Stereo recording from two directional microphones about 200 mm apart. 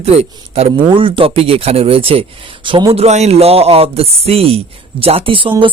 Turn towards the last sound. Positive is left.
turn(degrees=-25)  # may be behind; listen again after turning